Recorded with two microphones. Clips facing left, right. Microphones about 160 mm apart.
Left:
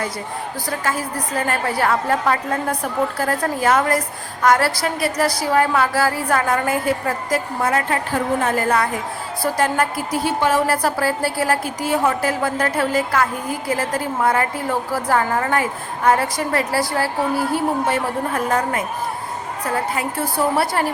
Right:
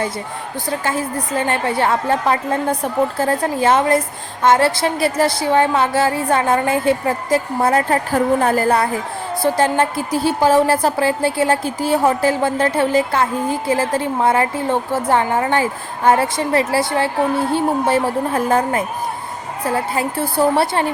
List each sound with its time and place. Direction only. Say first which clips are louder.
0.9 s a woman's voice: right 2 dB; 25° right (ahead or behind)